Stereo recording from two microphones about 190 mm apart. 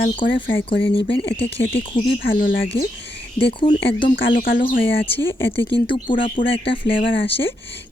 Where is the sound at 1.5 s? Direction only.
30° left (ahead or behind).